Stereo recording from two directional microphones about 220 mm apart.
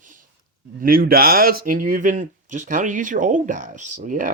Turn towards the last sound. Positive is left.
turn(degrees=-35)  # may be behind; listen again after turning